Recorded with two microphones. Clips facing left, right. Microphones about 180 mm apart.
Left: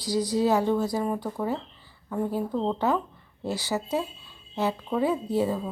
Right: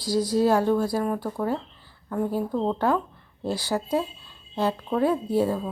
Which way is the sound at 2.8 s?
5° left (ahead or behind).